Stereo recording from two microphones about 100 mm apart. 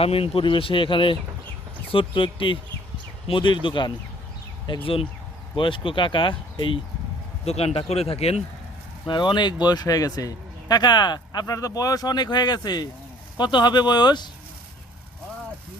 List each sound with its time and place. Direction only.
0.0 s a man's voice: 70° left (ahead or behind)
7.4 s speech: 90° left
9.0 s a man's voice: 50° left (ahead or behind)